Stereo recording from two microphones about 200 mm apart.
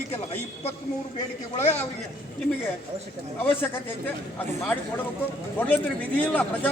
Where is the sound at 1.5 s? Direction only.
35° left (ahead or behind).